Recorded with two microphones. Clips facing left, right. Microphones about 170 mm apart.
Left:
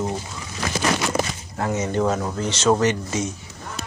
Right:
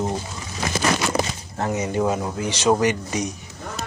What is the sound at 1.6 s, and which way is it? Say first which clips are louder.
Speech: even; 15° right (ahead or behind).